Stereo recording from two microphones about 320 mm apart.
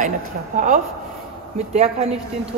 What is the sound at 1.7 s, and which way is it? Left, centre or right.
Speech, centre.